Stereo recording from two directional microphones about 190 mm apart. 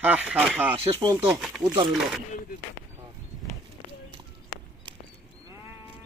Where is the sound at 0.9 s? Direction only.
25° right (ahead or behind).